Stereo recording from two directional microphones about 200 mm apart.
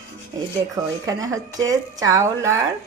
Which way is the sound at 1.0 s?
15° right (ahead or behind).